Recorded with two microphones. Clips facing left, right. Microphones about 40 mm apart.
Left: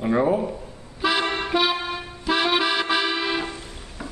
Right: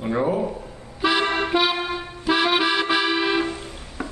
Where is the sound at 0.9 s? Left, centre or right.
Centre.